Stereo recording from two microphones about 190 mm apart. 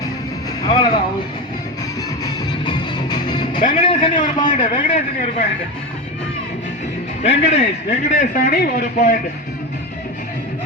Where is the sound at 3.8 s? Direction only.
25° left (ahead or behind).